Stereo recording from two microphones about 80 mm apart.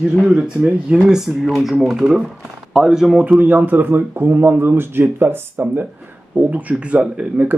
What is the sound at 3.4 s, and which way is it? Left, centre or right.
Speech, centre.